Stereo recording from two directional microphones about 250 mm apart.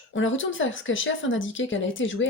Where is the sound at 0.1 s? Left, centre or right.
Left.